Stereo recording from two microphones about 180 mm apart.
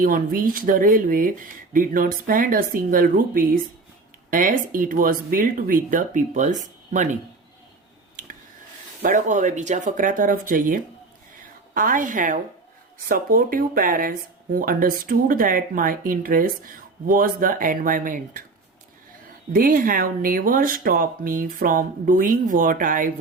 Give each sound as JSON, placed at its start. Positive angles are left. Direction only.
{"t": 0.0, "sound": "speech", "side_deg": -50}
{"t": 8.2, "sound": "a sound", "side_deg": -50}
{"t": 9.0, "sound": "speech", "side_deg": -45}
{"t": 19.5, "sound": "speech", "side_deg": -50}